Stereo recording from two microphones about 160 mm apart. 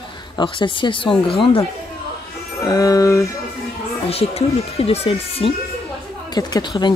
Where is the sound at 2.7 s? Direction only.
20° left (ahead or behind).